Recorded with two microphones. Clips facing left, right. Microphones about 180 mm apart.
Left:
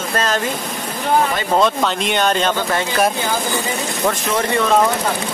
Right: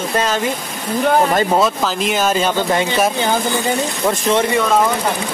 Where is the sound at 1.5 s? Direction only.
5° right (ahead or behind).